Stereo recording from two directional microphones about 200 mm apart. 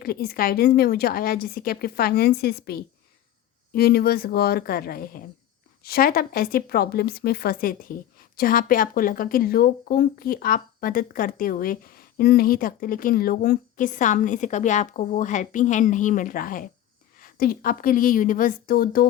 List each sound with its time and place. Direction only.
0.0 s speech: 50° left (ahead or behind)